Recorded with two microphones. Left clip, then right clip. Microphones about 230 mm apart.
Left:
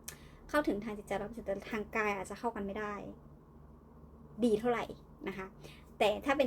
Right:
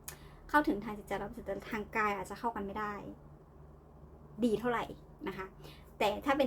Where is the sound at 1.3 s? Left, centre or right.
Centre.